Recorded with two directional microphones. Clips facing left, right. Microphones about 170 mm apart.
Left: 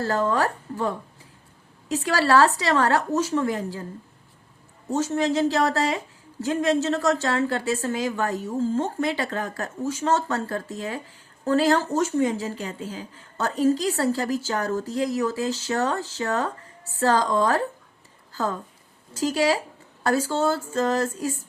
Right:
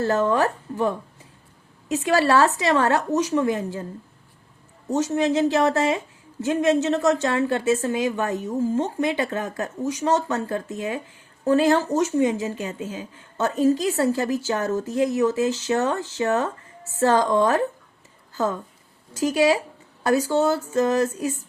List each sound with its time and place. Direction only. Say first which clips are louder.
0.0 s speech: right 3 dB; 20° right (ahead or behind)
4.9 s speech: right 2 dB; 20° right (ahead or behind)
19.1 s speech: right 3 dB; 20° right (ahead or behind)